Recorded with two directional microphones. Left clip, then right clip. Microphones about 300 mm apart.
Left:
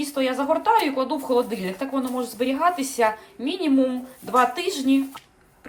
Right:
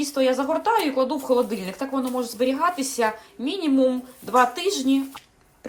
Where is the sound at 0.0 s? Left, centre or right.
Centre.